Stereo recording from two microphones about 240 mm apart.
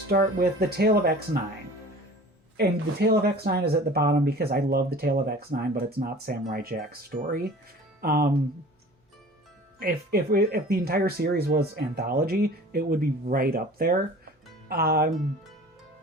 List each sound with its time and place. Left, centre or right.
0.1 s speech: right
2.6 s speech: right
9.8 s speech: right